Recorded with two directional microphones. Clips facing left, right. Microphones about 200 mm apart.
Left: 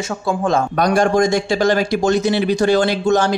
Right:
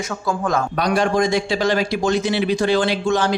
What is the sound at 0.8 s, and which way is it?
A man's voice, 45° left (ahead or behind).